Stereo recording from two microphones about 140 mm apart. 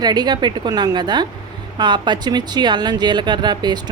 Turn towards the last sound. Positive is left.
turn(degrees=-30)  # may be behind; listen again after turning